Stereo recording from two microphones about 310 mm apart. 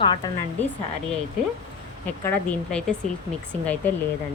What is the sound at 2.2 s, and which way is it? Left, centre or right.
Speech, centre.